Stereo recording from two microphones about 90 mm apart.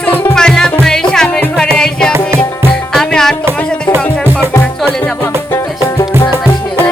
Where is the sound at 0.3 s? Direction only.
5° left (ahead or behind).